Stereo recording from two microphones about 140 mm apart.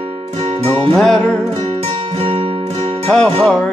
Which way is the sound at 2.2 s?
40° right (ahead or behind).